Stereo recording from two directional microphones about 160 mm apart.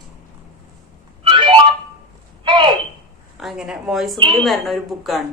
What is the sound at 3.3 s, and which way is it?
Speech, 5° right (ahead or behind).